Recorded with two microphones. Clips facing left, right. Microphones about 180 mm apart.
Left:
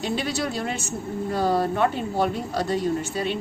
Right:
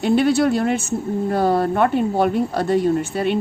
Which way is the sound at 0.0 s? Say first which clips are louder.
Right 10 dB; 60° right (ahead or behind).